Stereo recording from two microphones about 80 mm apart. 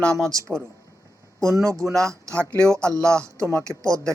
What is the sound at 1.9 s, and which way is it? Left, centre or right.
Speech, right.